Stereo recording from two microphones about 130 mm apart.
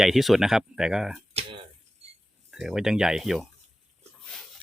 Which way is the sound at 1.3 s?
45° right (ahead or behind).